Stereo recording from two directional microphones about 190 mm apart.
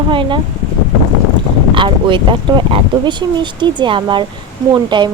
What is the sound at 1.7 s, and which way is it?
Speech, 25° right (ahead or behind).